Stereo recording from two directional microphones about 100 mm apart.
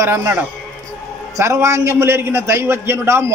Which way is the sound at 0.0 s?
25° right (ahead or behind).